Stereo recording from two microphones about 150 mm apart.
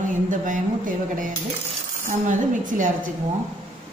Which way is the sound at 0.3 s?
60° right (ahead or behind).